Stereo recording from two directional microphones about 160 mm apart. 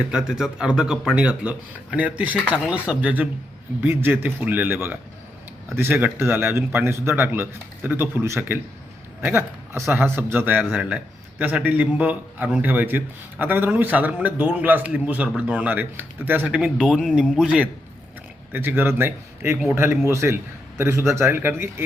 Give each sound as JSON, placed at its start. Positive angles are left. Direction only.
{"t": 0.1, "sound": "a man's voice", "side_deg": -5}